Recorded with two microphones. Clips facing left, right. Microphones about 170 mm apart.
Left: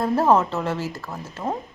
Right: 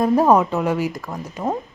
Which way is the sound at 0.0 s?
15° right (ahead or behind).